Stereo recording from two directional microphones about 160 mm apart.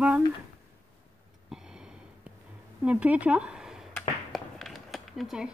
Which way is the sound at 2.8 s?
10° right (ahead or behind).